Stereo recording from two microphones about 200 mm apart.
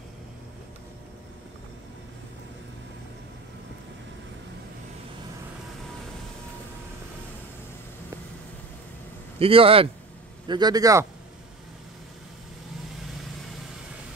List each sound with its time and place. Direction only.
9.4 s a man's voice: 30° right (ahead or behind)